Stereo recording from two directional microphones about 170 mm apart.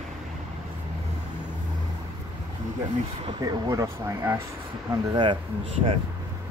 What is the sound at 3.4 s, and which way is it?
Speech, 20° right (ahead or behind).